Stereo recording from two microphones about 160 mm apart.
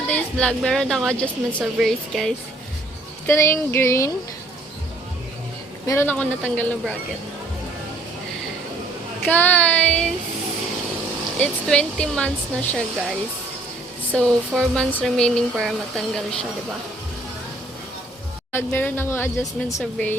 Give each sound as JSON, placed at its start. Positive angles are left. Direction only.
{"t": 0.1, "sound": "speech", "side_deg": 5}
{"t": 3.2, "sound": "speech", "side_deg": 15}
{"t": 5.8, "sound": "speech", "side_deg": 15}
{"t": 9.2, "sound": "speech", "side_deg": 10}
{"t": 11.3, "sound": "speech", "side_deg": 5}
{"t": 18.5, "sound": "speech", "side_deg": 15}